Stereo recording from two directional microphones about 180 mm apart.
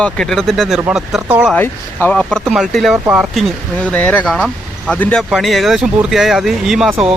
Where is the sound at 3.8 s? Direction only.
10° left (ahead or behind).